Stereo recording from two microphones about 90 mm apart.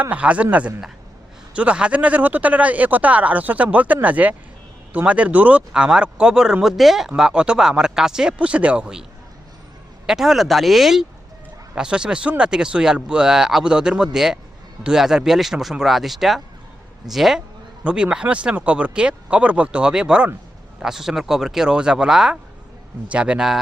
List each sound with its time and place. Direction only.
0.0 s speech: 15° right (ahead or behind)
1.5 s speech: 10° right (ahead or behind)
10.1 s speech: 5° right (ahead or behind)